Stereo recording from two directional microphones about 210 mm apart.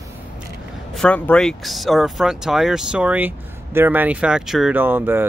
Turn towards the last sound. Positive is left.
turn(degrees=-10)  # may be behind; listen again after turning